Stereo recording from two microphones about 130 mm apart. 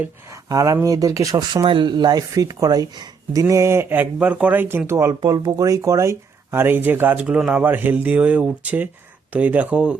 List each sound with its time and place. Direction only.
0.0 s speech: 25° right (ahead or behind)
1.6 s speech: 40° right (ahead or behind); by 5.1 s 20° right (ahead or behind)
5.2 s speech: 30° right (ahead or behind); by 10.0 s 10° right (ahead or behind)